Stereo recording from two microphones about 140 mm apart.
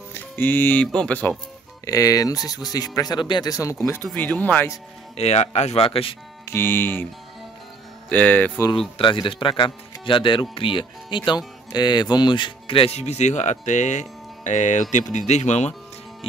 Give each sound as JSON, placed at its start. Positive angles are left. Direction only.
{"t": 0.1, "sound": "speech", "side_deg": 15}
{"t": 1.9, "sound": "speech", "side_deg": 25}
{"t": 5.1, "sound": "speech", "side_deg": 50}
{"t": 6.4, "sound": "speech", "side_deg": 15}
{"t": 8.1, "sound": "speech", "side_deg": 10}
{"t": 8.7, "sound": "speech", "side_deg": 40}